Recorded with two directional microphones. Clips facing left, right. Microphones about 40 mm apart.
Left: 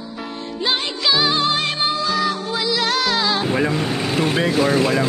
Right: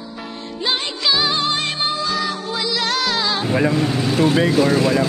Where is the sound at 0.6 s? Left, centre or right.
Centre.